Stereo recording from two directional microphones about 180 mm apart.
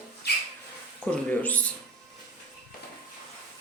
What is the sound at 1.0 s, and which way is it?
Speech, 10° left (ahead or behind).